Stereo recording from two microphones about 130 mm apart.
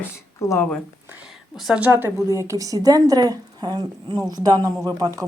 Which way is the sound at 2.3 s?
25° right (ahead or behind).